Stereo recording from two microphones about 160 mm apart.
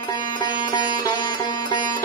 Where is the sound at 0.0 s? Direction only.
25° left (ahead or behind).